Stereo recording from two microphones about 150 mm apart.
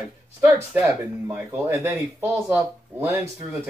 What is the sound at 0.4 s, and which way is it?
Speech, 15° right (ahead or behind).